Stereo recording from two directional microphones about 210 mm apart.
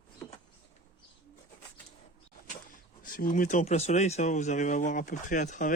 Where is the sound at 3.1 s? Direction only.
40° left (ahead or behind).